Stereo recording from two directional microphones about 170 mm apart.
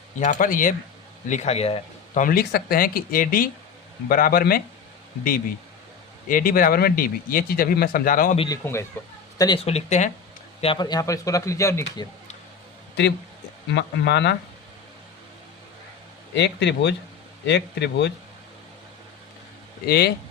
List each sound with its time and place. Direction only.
0.2 s speech: 50° left (ahead or behind)
1.3 s speech: 40° left (ahead or behind)
2.2 s speech: 60° left (ahead or behind)
6.2 s speech: 55° left (ahead or behind)
8.6 s speech: 15° left (ahead or behind)
9.6 s speech: 40° left (ahead or behind)
10.6 s speech: 30° left (ahead or behind)
13.7 s speech: 90° left
16.3 s speech: 90° left
19.8 s speech: 70° left (ahead or behind)